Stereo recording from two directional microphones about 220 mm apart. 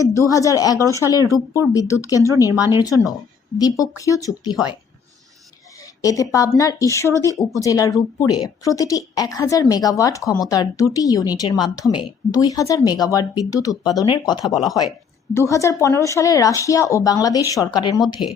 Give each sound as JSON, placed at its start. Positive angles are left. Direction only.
{"t": 0.3, "sound": "a woman's voice", "side_deg": 15}
{"t": 2.5, "sound": "speech", "side_deg": -10}
{"t": 2.7, "sound": "a woman's voice", "side_deg": 15}
{"t": 5.8, "sound": "a woman's voice", "side_deg": 15}
{"t": 14.5, "sound": "speech", "side_deg": 0}
{"t": 15.3, "sound": "a woman's voice", "side_deg": 15}